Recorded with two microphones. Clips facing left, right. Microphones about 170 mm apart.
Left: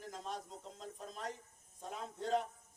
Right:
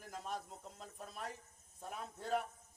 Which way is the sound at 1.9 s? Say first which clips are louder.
Left 3 dB; 25° left (ahead or behind).